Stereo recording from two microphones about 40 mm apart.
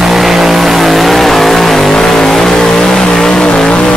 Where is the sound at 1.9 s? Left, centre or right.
Centre.